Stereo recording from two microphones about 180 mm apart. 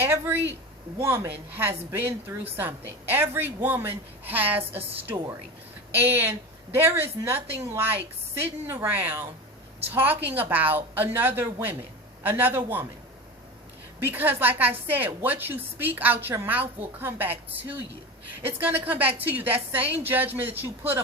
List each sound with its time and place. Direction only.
0.0 s a woman's voice: 15° right (ahead or behind)
14.0 s a woman's voice: 10° right (ahead or behind)
18.4 s a woman's voice: 10° right (ahead or behind)